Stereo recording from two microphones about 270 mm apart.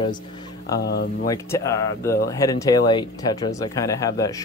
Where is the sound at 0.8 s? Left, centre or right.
Left.